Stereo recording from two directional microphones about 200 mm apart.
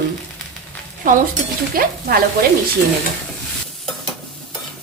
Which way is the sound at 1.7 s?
45° right (ahead or behind).